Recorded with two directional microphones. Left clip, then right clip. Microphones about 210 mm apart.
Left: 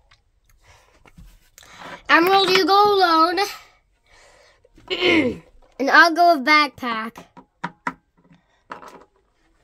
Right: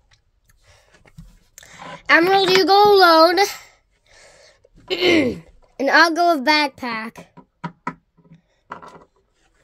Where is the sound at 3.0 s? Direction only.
25° right (ahead or behind).